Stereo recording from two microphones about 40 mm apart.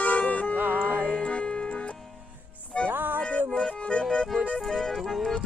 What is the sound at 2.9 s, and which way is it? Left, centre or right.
Music, right.